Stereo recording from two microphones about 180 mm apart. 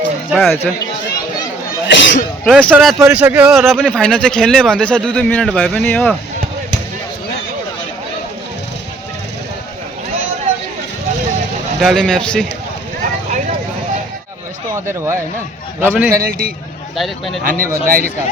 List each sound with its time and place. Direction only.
0.3 s a man's voice: centre (ahead or behind)
1.9 s sneeze: 85° left
2.4 s speech: 5° left (ahead or behind)
2.8 s a man's voice: 5° right (ahead or behind)
11.8 s a man's voice: centre (ahead or behind)
14.7 s speech: 15° right (ahead or behind)
16.0 s a man's voice: 55° right (ahead or behind)
17.0 s a man's voice: centre (ahead or behind)
17.4 s a man's voice: 50° right (ahead or behind)